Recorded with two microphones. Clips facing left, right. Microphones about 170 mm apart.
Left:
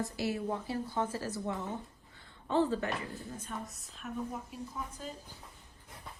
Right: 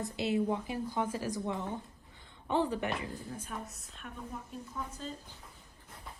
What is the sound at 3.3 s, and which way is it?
A woman's voice, 5° right (ahead or behind).